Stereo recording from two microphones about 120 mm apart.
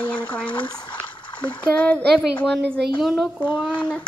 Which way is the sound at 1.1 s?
45° left (ahead or behind).